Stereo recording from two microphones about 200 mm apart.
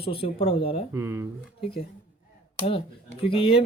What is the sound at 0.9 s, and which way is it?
Speech, 15° right (ahead or behind).